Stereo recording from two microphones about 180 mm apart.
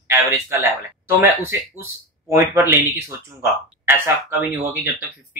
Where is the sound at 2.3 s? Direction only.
15° right (ahead or behind).